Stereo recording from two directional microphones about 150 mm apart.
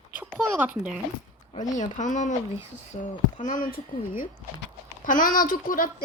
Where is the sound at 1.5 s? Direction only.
55° left (ahead or behind).